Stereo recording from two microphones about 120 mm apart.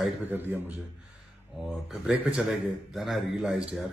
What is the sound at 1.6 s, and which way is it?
A man's voice, 5° right (ahead or behind).